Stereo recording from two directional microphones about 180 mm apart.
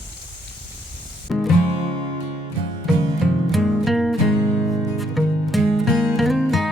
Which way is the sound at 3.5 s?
Centre (ahead or behind).